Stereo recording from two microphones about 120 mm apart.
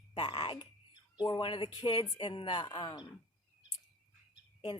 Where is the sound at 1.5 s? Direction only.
40° left (ahead or behind).